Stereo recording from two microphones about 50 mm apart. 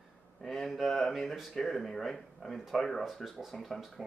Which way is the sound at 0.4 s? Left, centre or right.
Centre.